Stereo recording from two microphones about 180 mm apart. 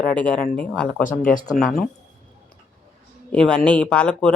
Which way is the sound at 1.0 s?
50° left (ahead or behind).